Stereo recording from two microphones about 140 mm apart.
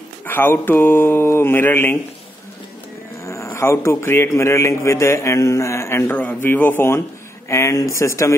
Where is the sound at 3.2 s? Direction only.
20° left (ahead or behind).